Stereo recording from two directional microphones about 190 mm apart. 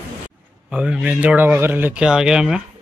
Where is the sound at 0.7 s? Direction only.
5° right (ahead or behind).